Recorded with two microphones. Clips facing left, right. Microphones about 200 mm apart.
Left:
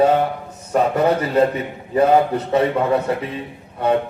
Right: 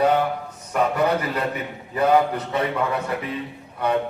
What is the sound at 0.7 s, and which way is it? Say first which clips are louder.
A man's voice: left 4 dB; 25° left (ahead or behind).